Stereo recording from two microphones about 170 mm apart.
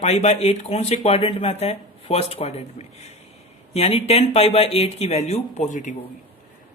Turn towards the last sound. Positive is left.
turn(degrees=45)  # may be behind; listen again after turning